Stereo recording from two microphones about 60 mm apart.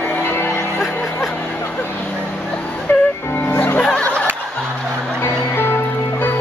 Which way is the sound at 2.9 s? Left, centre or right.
Left.